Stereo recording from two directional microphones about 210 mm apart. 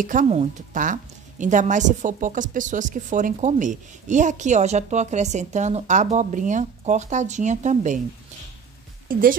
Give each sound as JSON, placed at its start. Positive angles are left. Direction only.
{"t": 0.0, "sound": "speech", "side_deg": -40}